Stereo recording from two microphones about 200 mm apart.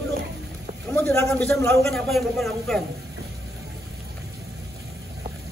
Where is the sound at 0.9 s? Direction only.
5° left (ahead or behind).